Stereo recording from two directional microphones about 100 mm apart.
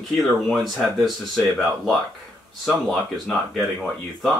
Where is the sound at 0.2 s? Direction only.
Centre (ahead or behind).